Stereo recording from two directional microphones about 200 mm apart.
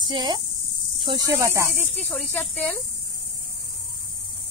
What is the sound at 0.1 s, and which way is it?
Speech, 20° right (ahead or behind).